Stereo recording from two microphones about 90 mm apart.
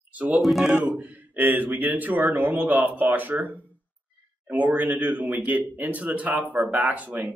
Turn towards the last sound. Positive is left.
turn(degrees=-15)  # may be behind; listen again after turning